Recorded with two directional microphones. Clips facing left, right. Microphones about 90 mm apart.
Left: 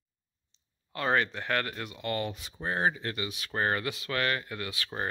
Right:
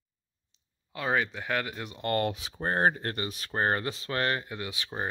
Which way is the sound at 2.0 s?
45° right (ahead or behind).